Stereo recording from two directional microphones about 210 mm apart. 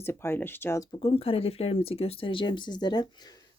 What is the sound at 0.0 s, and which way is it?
Speech, 10° left (ahead or behind).